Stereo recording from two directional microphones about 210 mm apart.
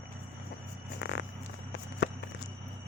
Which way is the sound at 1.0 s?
55° left (ahead or behind).